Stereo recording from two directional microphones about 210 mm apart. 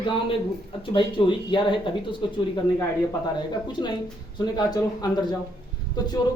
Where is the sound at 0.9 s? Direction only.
25° left (ahead or behind).